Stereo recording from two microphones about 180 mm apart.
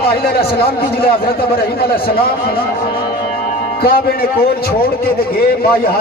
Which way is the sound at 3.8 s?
55° left (ahead or behind).